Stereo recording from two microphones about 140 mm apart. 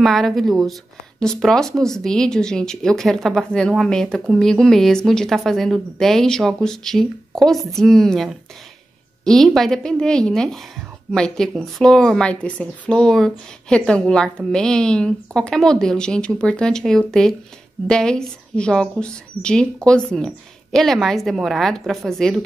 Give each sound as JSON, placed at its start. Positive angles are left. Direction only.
{"t": 0.0, "sound": "a woman's voice", "side_deg": 0}